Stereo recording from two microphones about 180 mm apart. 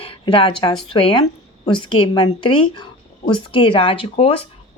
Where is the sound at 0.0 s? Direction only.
30° left (ahead or behind).